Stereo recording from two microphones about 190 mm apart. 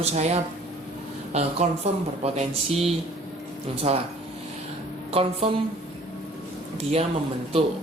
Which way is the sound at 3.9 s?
35° right (ahead or behind).